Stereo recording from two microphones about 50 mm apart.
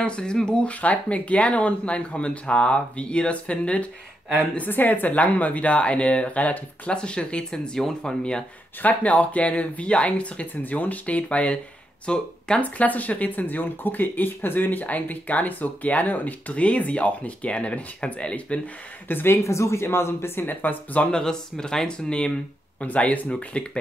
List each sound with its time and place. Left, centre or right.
0.0 s speech: centre
4.6 s speech: left; by 8.5 s centre
8.8 s speech: left
12.6 s speech: left
19.0 s speech: left
19.4 s speech: left
21.1 s speech: centre